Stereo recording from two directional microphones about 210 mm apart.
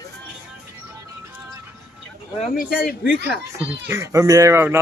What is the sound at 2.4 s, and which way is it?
Speech, 45° left (ahead or behind).